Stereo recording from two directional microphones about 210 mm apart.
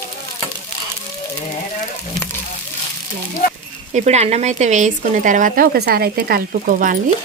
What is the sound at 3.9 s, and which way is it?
Speech, 30° right (ahead or behind).